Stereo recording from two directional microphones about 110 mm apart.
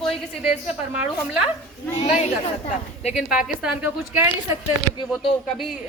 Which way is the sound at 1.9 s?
85° left.